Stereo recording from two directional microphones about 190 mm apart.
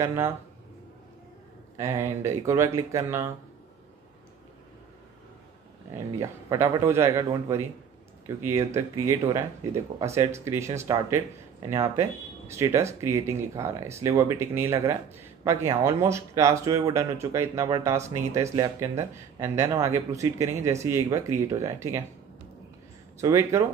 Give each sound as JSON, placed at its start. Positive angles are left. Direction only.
{"t": 0.0, "sound": "speech", "side_deg": -15}
{"t": 1.8, "sound": "speech", "side_deg": -15}
{"t": 6.1, "sound": "speech", "side_deg": -15}
{"t": 23.2, "sound": "speech", "side_deg": -15}